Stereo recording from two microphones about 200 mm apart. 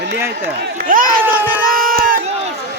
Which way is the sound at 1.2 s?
10° right (ahead or behind).